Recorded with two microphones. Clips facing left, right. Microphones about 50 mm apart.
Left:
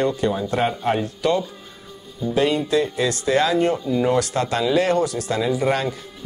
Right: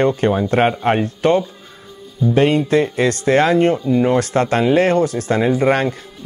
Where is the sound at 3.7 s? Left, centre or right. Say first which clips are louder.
Right 4 dB; right.